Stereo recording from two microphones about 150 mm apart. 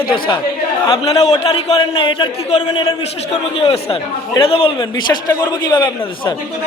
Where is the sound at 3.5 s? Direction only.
40° left (ahead or behind).